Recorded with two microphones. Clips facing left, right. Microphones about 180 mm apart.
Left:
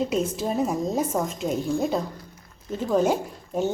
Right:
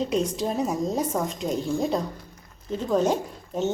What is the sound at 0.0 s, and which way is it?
A woman's voice, 5° left (ahead or behind).